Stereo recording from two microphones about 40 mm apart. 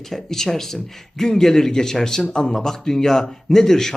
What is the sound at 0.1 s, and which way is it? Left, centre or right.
Speech, centre.